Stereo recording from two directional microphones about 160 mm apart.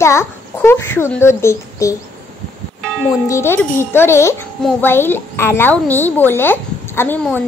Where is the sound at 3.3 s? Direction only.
15° left (ahead or behind).